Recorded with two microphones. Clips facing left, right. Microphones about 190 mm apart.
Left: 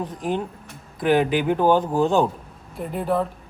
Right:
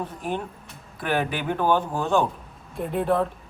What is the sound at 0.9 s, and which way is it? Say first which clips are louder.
Speech: left 7 dB; 15° left (ahead or behind).